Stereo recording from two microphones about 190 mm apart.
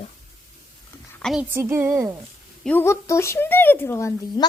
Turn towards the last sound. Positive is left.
turn(degrees=15)  # may be behind; listen again after turning